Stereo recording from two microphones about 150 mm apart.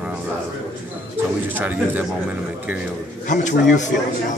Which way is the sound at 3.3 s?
55° left (ahead or behind).